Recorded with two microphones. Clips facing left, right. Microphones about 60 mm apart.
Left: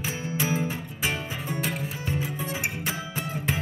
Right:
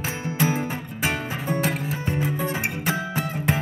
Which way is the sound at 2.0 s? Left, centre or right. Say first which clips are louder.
Right 6 dB; right.